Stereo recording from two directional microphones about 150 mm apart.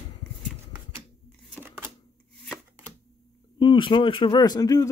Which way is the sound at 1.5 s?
10° right (ahead or behind).